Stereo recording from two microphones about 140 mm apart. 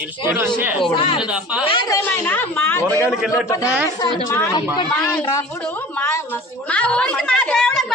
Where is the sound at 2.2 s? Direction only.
15° left (ahead or behind).